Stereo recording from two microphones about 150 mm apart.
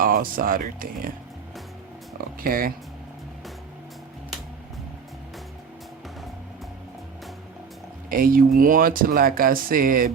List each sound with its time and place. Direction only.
0.0 s speech: 75° right (ahead or behind)
2.4 s speech: 70° right (ahead or behind)
8.1 s speech: 70° right (ahead or behind)